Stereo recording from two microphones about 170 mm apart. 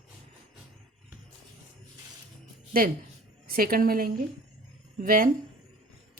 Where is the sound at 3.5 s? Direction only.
60° right (ahead or behind).